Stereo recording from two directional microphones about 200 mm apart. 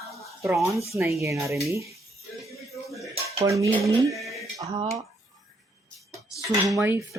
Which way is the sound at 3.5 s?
15° right (ahead or behind).